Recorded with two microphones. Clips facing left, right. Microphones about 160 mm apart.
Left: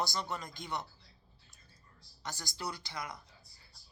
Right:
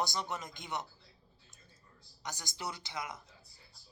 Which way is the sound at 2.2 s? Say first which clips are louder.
Left 1 dB; 20° right (ahead or behind).